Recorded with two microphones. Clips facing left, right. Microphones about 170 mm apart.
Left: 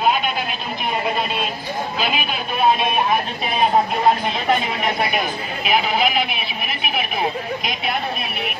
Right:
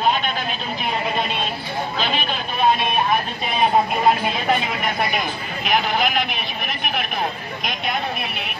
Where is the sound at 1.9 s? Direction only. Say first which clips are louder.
Left 1 dB; 10° left (ahead or behind).